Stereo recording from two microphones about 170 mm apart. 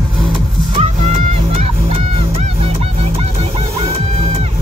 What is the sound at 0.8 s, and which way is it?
Music, 35° right (ahead or behind).